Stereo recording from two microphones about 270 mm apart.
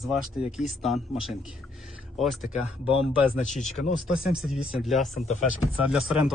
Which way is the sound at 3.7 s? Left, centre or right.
Left.